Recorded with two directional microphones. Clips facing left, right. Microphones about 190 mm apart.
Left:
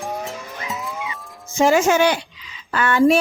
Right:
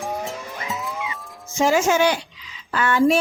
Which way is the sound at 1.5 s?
60° left (ahead or behind).